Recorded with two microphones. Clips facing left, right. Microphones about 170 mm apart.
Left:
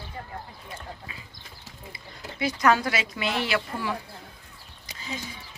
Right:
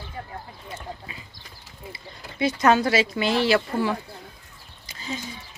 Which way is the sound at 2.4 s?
25° right (ahead or behind).